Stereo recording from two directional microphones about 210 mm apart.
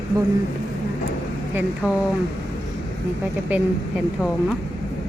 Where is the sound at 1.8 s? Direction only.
5° right (ahead or behind).